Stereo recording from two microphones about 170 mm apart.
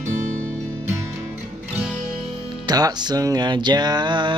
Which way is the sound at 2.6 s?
25° right (ahead or behind).